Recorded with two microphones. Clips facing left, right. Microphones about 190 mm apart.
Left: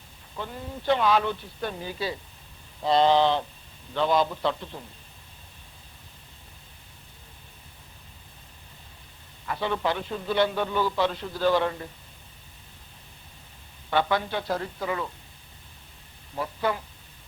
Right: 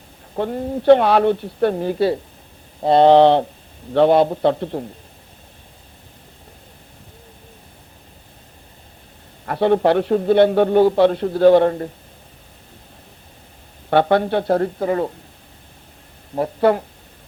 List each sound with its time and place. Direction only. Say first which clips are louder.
0.3 s a man's voice: right 13 dB; 60° right (ahead or behind)
0.8 s a man's voice: right 10 dB; 65° right (ahead or behind)
9.5 s a man's voice: right 12 dB; 60° right (ahead or behind)
13.9 s a man's voice: right 10 dB; 60° right (ahead or behind)
16.3 s a man's voice: right 12 dB; 55° right (ahead or behind)